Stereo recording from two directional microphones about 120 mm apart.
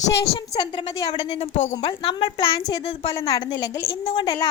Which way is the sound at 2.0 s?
45° left (ahead or behind).